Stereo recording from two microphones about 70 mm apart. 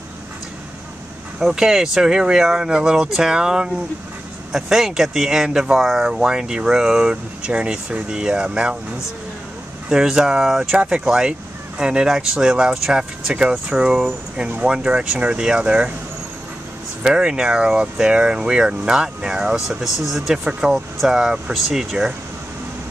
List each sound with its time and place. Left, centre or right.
1.4 s speech: centre
9.8 s speech: centre
17.0 s speech: centre